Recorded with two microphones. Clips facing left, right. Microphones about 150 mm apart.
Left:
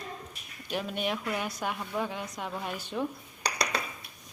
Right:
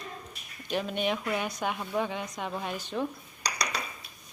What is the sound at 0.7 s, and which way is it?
A woman's voice, 5° left (ahead or behind).